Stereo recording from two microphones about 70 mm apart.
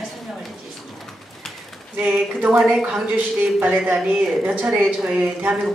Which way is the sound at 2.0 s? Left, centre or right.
Centre.